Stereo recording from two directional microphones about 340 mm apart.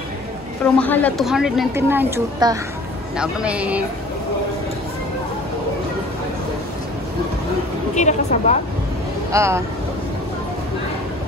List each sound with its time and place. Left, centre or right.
0.7 s a woman's voice: centre
7.9 s a woman's voice: left
9.3 s speech: centre